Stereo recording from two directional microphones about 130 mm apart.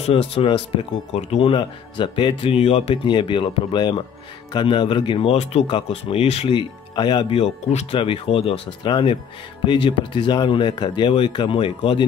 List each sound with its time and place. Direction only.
0.0 s speech: 45° left (ahead or behind)